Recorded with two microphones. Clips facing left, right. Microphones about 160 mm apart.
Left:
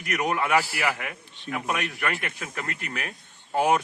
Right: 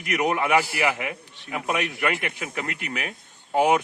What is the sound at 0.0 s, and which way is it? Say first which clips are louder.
A man's voice: right 3 dB; 15° right (ahead or behind).